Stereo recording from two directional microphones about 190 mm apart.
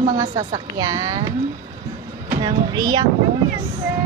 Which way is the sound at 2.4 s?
20° right (ahead or behind).